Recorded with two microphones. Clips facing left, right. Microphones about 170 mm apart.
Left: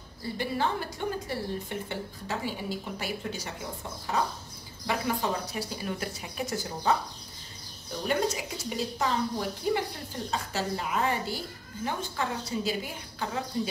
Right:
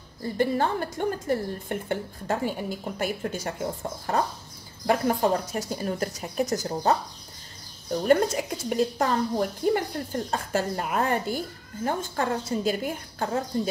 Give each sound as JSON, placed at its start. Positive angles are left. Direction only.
{"t": 0.2, "sound": "a woman's voice", "side_deg": -50}
{"t": 8.1, "sound": "a woman's voice", "side_deg": -50}